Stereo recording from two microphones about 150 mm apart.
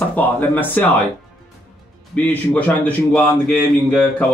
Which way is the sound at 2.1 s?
10° left (ahead or behind).